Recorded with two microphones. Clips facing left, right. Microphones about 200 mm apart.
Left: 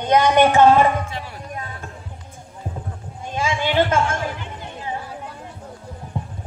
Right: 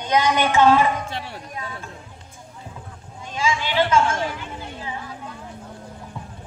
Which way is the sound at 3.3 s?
50° left (ahead or behind).